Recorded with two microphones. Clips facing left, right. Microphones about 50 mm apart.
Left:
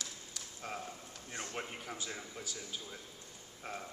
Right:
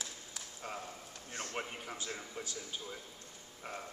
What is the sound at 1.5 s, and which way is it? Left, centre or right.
Speech, centre.